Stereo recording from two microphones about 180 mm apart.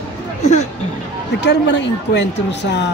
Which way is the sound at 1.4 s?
80° left.